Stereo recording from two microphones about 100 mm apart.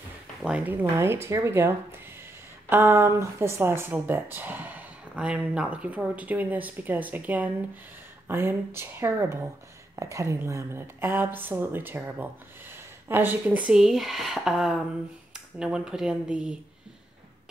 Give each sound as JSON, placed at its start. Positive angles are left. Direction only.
{"t": 0.7, "sound": "a woman's voice", "side_deg": -25}